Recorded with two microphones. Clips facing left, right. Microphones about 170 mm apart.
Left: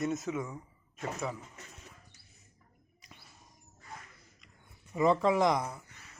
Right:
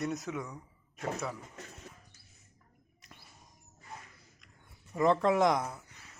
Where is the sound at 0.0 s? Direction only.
Centre (ahead or behind).